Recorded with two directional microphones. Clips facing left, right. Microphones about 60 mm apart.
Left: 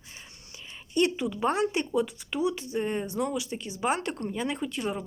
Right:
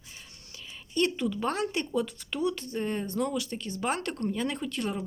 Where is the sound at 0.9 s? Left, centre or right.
Centre.